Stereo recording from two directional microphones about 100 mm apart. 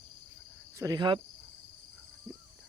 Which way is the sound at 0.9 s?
50° right (ahead or behind).